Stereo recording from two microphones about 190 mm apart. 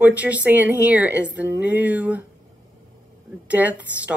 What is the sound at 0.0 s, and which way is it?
Speech, 10° right (ahead or behind).